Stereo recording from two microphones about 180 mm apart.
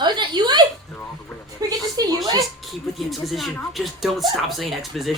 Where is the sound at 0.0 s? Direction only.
25° right (ahead or behind).